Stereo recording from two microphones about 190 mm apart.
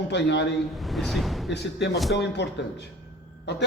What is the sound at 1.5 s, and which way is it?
A man's voice, 60° left (ahead or behind).